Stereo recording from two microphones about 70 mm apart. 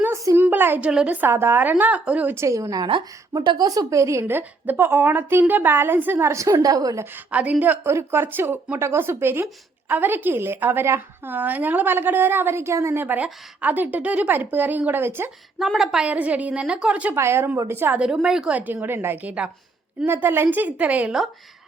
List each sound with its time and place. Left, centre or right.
0.3 s a sound: right
0.8 s a woman's voice: centre
1.0 s a woman's voice: right
2.3 s a woman's voice: right
3.3 s a woman's voice: right
7.3 s a woman's voice: centre
7.9 s a woman's voice: right
13.1 s a woman's voice: right
15.5 s a woman's voice: centre
16.0 s a woman's voice: right
17.2 s a woman's voice: right
18.0 s a woman's voice: centre
18.5 s a woman's voice: right
20.1 s a woman's voice: right